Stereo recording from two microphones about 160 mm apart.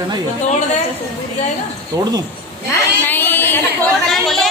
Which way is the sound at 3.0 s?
10° left (ahead or behind).